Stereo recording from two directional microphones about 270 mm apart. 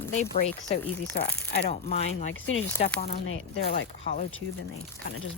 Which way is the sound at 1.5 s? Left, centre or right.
Left.